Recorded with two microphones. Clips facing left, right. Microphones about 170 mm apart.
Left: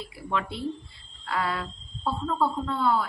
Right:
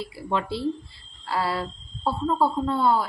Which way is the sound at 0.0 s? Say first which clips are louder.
Right 3 dB; 30° right (ahead or behind).